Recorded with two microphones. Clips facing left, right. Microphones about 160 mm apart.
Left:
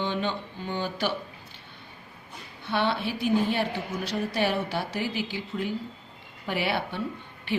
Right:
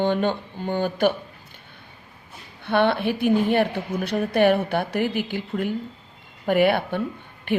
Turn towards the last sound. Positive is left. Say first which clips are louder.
# right 5 dB
turn(degrees=-55)  # may be behind; listen again after turning